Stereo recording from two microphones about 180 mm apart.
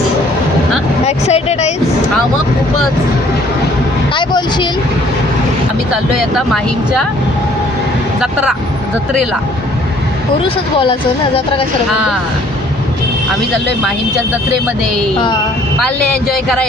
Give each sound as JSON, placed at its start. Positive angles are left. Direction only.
{"t": 1.0, "sound": "vehicle", "side_deg": 35}
{"t": 4.1, "sound": "speech", "side_deg": 25}
{"t": 8.2, "sound": "speech", "side_deg": -5}